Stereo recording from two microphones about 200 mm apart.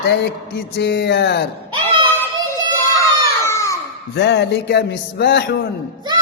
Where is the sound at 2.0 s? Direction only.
10° left (ahead or behind).